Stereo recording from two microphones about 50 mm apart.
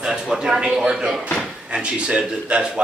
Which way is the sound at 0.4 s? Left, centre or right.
Centre.